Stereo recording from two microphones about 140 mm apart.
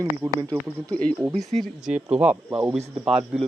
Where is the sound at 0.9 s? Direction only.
10° left (ahead or behind).